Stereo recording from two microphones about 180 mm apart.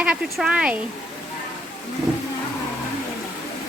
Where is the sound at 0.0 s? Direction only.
5° right (ahead or behind).